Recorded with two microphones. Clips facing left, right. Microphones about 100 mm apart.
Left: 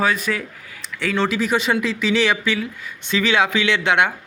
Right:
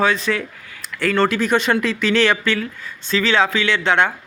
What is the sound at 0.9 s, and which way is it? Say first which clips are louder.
A man's voice: right 3 dB; centre (ahead or behind).